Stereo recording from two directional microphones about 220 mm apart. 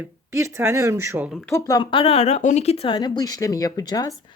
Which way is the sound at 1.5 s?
15° left (ahead or behind).